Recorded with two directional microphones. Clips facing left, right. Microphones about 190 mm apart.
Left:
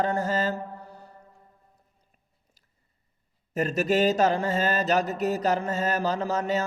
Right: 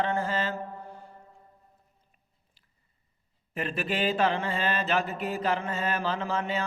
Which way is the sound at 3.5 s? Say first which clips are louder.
Left 7 dB; 40° left (ahead or behind).